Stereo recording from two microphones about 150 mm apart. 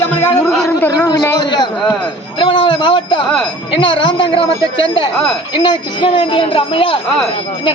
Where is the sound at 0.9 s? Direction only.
25° left (ahead or behind).